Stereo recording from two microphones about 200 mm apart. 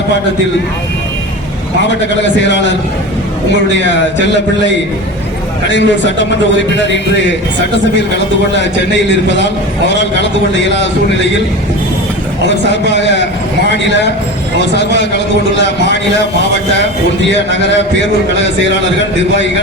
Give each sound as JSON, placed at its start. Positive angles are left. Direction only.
{"t": 2.5, "sound": "a man's voice", "side_deg": 65}
{"t": 5.7, "sound": "a man's voice", "side_deg": 65}
{"t": 12.9, "sound": "a man's voice", "side_deg": 65}
{"t": 15.6, "sound": "a man's voice", "side_deg": 60}